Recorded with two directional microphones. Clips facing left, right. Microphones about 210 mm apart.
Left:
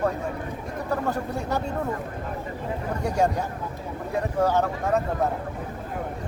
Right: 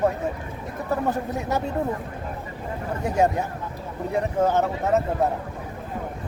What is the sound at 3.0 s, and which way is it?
Speech, 20° right (ahead or behind).